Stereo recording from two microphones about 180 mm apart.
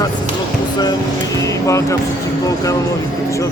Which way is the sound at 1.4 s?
15° left (ahead or behind).